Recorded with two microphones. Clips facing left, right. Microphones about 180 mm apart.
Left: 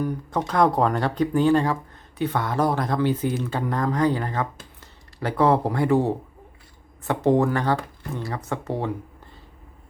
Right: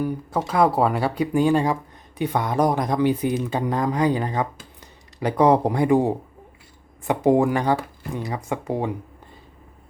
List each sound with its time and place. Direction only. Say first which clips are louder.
0.0 s speech: right 1 dB; 5° right (ahead or behind)